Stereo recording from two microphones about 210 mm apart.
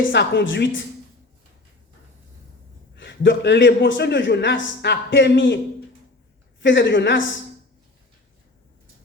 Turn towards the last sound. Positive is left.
turn(degrees=60)  # may be behind; listen again after turning